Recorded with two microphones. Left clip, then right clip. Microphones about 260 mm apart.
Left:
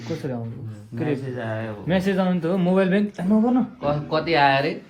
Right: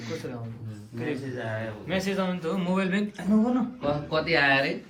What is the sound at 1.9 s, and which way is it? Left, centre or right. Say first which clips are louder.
A man's voice: left 6 dB; left.